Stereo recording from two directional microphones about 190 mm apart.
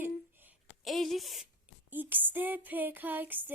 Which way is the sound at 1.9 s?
10° right (ahead or behind).